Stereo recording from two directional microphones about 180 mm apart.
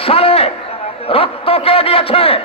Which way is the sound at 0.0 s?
30° left (ahead or behind).